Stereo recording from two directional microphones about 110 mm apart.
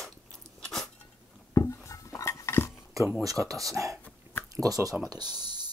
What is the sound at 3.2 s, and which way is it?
Speech, 30° right (ahead or behind).